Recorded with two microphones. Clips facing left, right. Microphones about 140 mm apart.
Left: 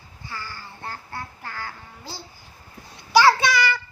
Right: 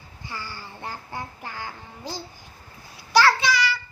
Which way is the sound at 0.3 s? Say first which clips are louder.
Even; 15° right (ahead or behind).